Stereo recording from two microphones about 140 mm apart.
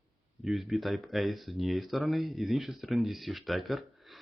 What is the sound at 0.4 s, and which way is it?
Speech, centre (ahead or behind).